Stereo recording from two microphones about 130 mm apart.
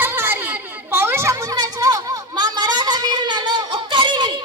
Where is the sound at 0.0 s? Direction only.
15° right (ahead or behind).